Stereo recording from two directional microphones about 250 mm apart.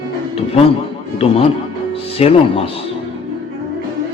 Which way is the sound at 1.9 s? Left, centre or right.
Left.